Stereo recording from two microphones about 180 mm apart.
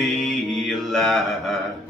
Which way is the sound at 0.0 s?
Centre (ahead or behind).